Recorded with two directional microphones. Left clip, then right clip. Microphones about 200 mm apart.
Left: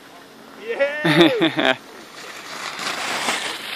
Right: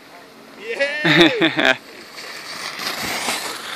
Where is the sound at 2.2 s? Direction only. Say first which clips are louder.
Right 1 dB; 5° right (ahead or behind).